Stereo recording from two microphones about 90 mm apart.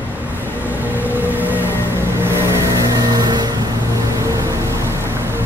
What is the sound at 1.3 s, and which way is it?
Music, 20° right (ahead or behind).